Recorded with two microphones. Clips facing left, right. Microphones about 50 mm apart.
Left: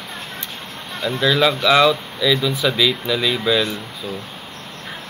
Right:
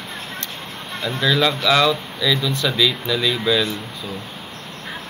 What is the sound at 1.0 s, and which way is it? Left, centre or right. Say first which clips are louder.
Speech: left 2 dB; centre.